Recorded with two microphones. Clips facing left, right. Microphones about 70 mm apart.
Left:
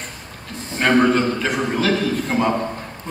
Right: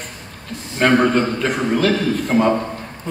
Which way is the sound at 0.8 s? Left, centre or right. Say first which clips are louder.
Right 1 dB; centre.